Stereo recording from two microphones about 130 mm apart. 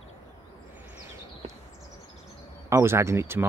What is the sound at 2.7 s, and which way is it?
Speech, 20° right (ahead or behind).